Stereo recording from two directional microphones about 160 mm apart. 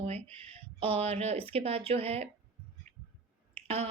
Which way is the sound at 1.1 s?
40° right (ahead or behind).